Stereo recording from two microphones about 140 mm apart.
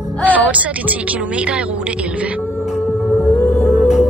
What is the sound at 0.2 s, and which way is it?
Speech, 10° right (ahead or behind).